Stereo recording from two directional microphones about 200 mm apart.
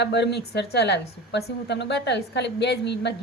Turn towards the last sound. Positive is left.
turn(degrees=60)  # may be behind; listen again after turning